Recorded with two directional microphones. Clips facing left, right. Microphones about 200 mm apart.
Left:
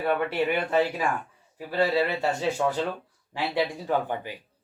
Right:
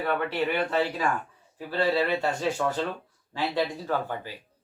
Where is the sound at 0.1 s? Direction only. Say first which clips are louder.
Left 3 dB; 10° left (ahead or behind).